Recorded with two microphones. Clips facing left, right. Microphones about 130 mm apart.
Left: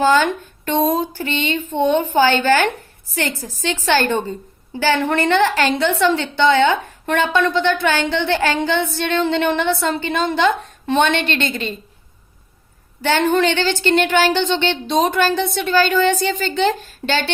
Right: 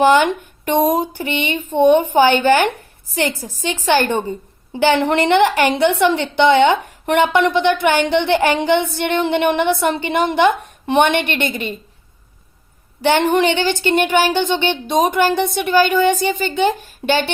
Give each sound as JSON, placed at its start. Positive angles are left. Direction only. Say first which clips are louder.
{"t": 0.0, "sound": "a woman's voice", "louder": "right 3 dB", "side_deg": -15}
{"t": 13.1, "sound": "speech", "louder": "right 2 dB", "side_deg": -15}